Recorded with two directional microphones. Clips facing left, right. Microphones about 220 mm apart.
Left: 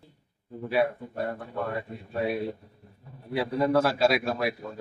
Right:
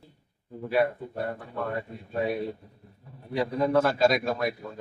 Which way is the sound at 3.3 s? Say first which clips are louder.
Even; 5° left (ahead or behind).